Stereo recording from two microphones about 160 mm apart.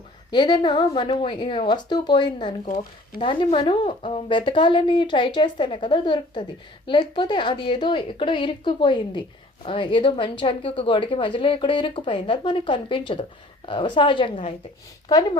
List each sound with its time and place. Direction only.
0.3 s a woman's voice: 25° left (ahead or behind)